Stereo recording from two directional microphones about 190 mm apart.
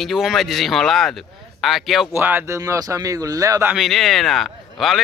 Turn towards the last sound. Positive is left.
turn(degrees=0)  # may be behind; listen again after turning